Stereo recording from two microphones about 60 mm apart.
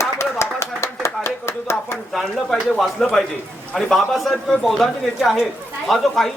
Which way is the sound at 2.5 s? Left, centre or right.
Centre.